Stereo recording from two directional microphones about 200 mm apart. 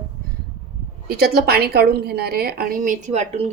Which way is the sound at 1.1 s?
50° right (ahead or behind).